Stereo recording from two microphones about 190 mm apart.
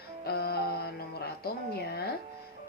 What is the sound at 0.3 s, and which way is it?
Music, 55° left (ahead or behind).